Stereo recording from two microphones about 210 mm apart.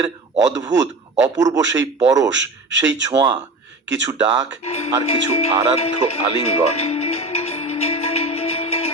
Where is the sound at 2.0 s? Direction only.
15° right (ahead or behind).